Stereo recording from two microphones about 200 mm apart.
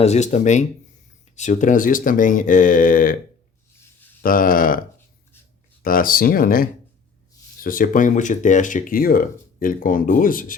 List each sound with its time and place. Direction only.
0.0 s speech: 35° left (ahead or behind)
4.2 s speech: 45° left (ahead or behind)
5.8 s speech: 45° left (ahead or behind)